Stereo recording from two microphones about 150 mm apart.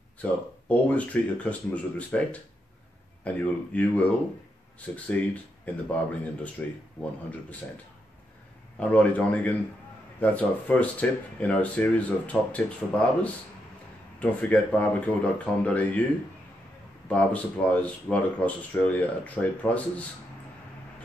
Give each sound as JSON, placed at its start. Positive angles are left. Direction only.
{"t": 0.2, "sound": "speech", "side_deg": 10}
{"t": 3.3, "sound": "speech", "side_deg": 10}
{"t": 8.7, "sound": "speech", "side_deg": 10}
{"t": 17.1, "sound": "speech", "side_deg": 10}